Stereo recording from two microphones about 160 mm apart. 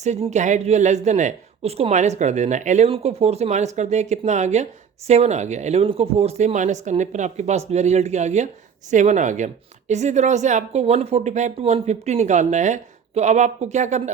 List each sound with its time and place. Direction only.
0.0 s speech: 45° right (ahead or behind)